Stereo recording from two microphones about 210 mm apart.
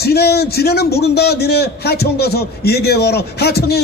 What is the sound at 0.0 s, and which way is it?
A man's voice, 50° left (ahead or behind).